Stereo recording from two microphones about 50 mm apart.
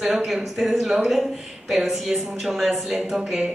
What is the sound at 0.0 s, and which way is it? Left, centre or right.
A woman's voice, centre.